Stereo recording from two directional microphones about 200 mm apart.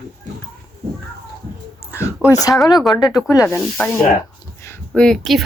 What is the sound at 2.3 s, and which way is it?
Speech, 20° left (ahead or behind).